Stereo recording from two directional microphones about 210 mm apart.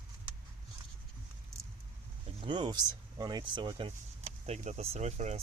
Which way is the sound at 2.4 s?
20° right (ahead or behind).